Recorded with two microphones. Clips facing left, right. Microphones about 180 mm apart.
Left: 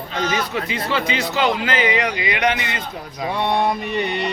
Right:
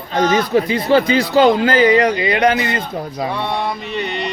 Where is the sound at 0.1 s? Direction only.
45° right (ahead or behind).